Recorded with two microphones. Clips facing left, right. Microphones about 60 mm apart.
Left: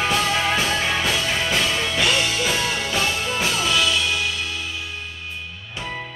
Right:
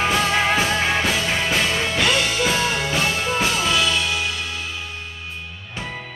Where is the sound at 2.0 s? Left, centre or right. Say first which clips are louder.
Right 2 dB; centre.